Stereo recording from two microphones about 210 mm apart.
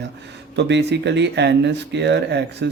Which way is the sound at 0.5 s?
55° right (ahead or behind).